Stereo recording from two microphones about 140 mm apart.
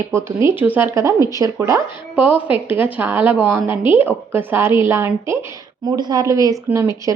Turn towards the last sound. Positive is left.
turn(degrees=-20)  # may be behind; listen again after turning